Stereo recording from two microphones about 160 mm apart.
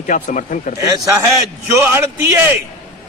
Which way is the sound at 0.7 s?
20° right (ahead or behind).